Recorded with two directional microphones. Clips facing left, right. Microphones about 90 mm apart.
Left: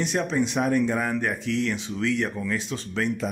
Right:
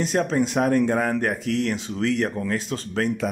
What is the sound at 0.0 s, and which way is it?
Speech, 40° right (ahead or behind).